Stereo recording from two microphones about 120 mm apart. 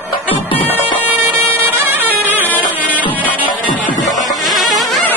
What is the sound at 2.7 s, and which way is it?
Music, 15° right (ahead or behind).